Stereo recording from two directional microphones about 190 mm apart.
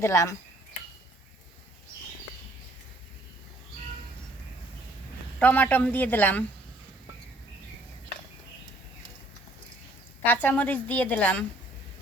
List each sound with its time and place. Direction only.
0.0 s a woman's voice: 15° left (ahead or behind)
5.4 s a woman's voice: 10° left (ahead or behind)
10.2 s a woman's voice: 10° left (ahead or behind)